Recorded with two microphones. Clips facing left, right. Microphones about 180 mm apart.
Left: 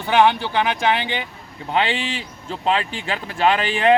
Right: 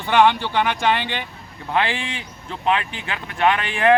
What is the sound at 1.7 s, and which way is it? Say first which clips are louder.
Speech: left 1 dB; 25° left (ahead or behind).